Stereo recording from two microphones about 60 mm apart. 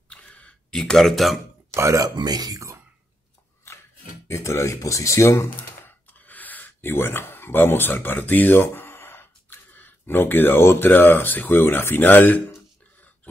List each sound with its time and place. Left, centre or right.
0.1 s a sound: left
0.7 s speech: centre
1.7 s speech: right
2.0 s speech: right
4.3 s speech: left
6.0 s speech: left